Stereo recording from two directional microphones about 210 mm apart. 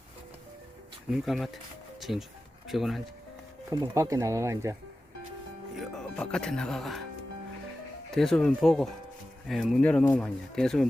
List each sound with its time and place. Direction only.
1.1 s speech: centre (ahead or behind)
2.0 s music: centre (ahead or behind)
2.6 s speech: centre (ahead or behind)
3.7 s speech: 15° right (ahead or behind)
5.8 s speech: 5° left (ahead or behind)
8.1 s speech: centre (ahead or behind)